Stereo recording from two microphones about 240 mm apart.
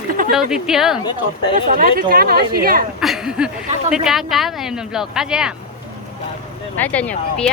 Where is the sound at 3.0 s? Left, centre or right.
Centre.